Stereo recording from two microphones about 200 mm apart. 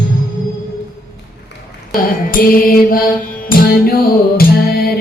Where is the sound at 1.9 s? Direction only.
45° left (ahead or behind).